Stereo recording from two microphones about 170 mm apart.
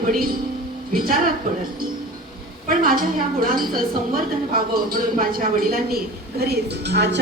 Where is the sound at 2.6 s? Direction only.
55° right (ahead or behind).